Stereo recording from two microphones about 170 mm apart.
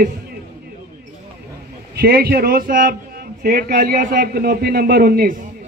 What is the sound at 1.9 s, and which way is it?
A man's voice, 60° right (ahead or behind).